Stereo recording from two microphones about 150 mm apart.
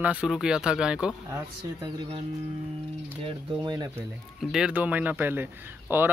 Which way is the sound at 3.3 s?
25° right (ahead or behind).